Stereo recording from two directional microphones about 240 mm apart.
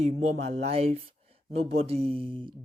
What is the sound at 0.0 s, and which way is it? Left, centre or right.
Speech, right.